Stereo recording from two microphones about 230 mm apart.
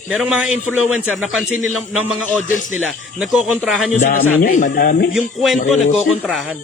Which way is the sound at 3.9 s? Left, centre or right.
Left.